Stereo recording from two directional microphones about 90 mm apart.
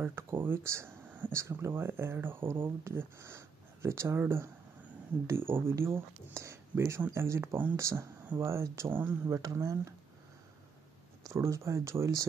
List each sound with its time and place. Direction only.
0.0 s speech: 25° right (ahead or behind)
7.8 s speech: 35° right (ahead or behind)
9.3 s speech: 35° right (ahead or behind)
11.2 s speech: 35° right (ahead or behind)